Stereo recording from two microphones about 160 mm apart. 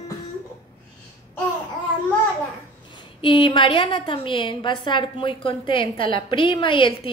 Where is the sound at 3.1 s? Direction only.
30° left (ahead or behind).